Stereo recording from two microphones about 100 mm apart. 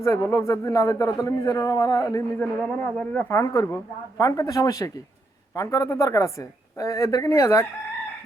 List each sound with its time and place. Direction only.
0.0 s a man's voice: 30° left (ahead or behind)
2.4 s speech: 10° left (ahead or behind)
3.2 s a man's voice: 30° left (ahead or behind)